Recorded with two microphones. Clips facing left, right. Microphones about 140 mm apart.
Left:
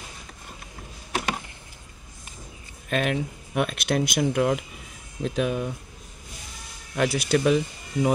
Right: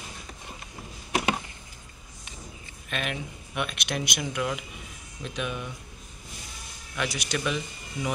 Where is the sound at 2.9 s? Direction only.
40° left (ahead or behind).